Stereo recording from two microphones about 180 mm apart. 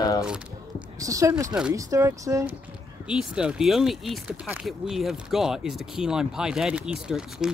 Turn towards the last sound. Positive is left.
turn(degrees=-5)  # may be behind; listen again after turning